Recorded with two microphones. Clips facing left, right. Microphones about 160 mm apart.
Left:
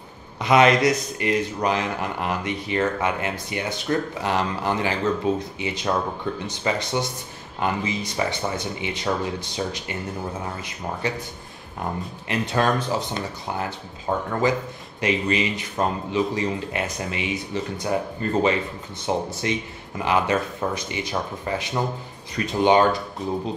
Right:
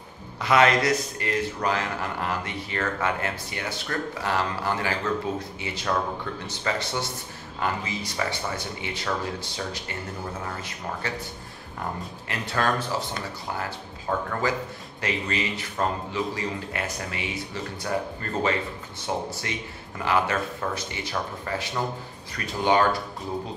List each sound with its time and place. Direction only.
0.4 s speech: 20° left (ahead or behind)